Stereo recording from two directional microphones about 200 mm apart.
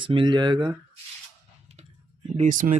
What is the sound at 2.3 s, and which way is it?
Speech, 40° right (ahead or behind).